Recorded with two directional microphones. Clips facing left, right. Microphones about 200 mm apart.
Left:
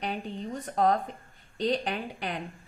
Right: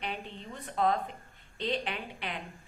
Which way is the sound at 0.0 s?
40° left (ahead or behind).